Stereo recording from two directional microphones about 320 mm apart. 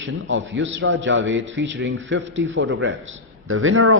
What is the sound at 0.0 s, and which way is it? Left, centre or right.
A man's voice, right.